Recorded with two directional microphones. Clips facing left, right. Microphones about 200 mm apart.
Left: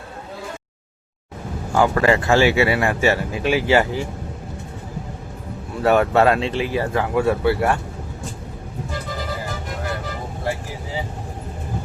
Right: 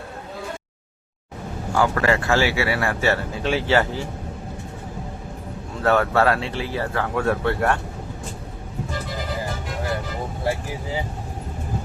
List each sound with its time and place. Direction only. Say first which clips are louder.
1.7 s speech: left 3 dB; 20° left (ahead or behind)
5.8 s speech: left 3 dB; 15° left (ahead or behind)